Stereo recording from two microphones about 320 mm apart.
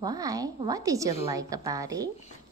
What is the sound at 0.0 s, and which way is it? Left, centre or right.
Speech, centre.